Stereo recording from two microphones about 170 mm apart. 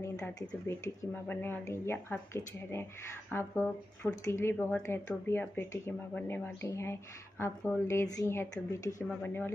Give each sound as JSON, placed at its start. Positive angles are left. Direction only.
{"t": 0.5, "sound": "a woman's voice", "side_deg": 10}